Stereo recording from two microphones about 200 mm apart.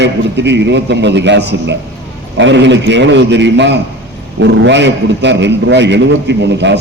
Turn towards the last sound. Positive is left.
turn(degrees=-60)  # may be behind; listen again after turning